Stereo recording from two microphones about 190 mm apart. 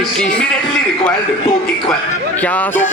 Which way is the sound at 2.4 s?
10° left (ahead or behind).